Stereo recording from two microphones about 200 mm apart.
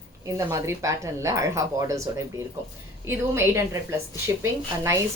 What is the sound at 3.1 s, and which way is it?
A woman's voice, 10° right (ahead or behind).